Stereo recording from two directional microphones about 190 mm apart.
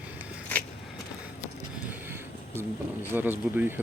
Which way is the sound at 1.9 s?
10° right (ahead or behind).